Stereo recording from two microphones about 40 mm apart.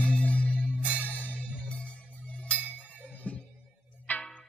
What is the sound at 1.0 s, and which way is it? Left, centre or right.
Music, left.